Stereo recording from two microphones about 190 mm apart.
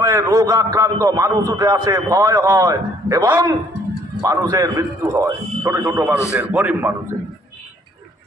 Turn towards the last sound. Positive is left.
turn(degrees=-5)  # may be behind; listen again after turning